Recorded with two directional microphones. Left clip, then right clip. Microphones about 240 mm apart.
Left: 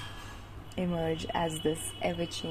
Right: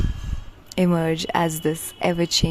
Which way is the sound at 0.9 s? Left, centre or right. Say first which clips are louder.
Right 7 dB; right.